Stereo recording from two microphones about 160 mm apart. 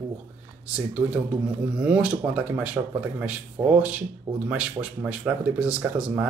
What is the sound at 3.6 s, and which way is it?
Speech, 25° right (ahead or behind).